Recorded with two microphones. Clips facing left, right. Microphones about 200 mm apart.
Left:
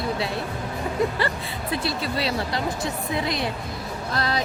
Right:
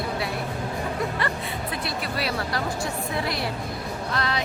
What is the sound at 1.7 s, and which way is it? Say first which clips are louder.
A woman's voice: left 7 dB; 25° left (ahead or behind).